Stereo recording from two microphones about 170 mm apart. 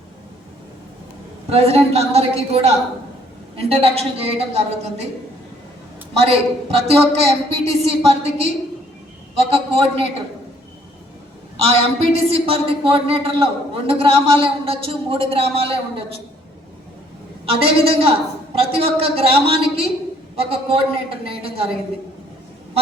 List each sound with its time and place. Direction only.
1.5 s a woman's voice: 35° right (ahead or behind)
6.2 s a woman's voice: 35° right (ahead or behind)
11.5 s a woman's voice: 35° right (ahead or behind)
17.4 s a woman's voice: 35° right (ahead or behind)